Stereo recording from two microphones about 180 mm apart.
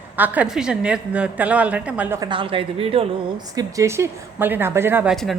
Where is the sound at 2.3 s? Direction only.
30° right (ahead or behind).